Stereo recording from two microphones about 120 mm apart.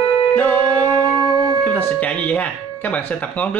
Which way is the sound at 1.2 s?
30° right (ahead or behind).